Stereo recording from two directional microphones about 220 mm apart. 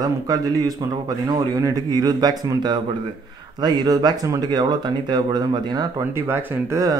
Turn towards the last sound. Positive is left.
turn(degrees=-15)  # may be behind; listen again after turning